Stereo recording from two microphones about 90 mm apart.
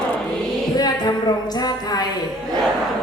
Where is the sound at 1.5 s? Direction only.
50° left (ahead or behind).